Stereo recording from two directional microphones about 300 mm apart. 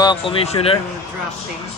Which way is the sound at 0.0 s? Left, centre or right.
Centre.